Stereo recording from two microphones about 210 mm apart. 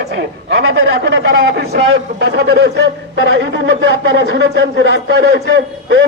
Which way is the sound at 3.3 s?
60° right (ahead or behind).